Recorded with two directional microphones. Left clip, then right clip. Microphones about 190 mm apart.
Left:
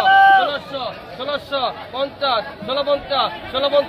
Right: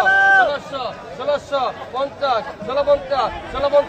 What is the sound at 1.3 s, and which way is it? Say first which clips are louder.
A man's voice: right 2 dB; 25° left (ahead or behind).